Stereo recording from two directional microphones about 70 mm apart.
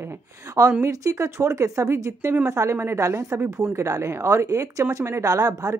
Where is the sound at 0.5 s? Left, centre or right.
Right.